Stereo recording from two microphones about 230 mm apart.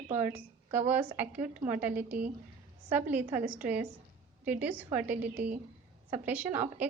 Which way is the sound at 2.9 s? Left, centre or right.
Centre.